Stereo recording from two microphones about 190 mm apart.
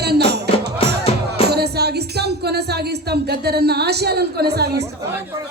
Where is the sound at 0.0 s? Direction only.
60° right (ahead or behind).